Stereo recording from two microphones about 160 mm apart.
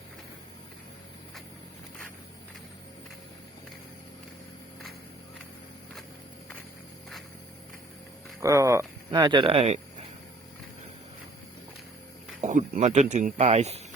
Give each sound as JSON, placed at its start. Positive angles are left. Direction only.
{"t": 8.4, "sound": "speech", "side_deg": -20}
{"t": 12.4, "sound": "speech", "side_deg": -50}
{"t": 13.4, "sound": "speech", "side_deg": -40}